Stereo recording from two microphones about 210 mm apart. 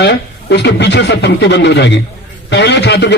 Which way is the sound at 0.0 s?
55° left (ahead or behind).